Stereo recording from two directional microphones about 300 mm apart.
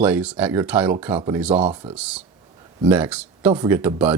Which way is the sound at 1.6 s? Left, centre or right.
Centre.